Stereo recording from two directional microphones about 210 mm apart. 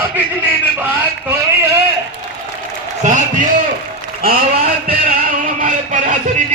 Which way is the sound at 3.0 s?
35° right (ahead or behind).